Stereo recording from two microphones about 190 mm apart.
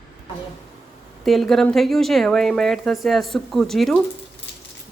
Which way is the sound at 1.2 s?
Centre (ahead or behind).